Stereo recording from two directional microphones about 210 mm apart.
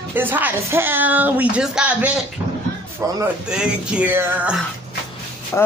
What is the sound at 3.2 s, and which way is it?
A woman's voice, 5° right (ahead or behind).